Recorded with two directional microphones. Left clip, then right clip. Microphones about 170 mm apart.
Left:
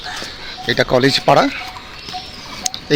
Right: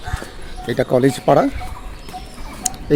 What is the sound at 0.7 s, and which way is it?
Speech, 15° right (ahead or behind).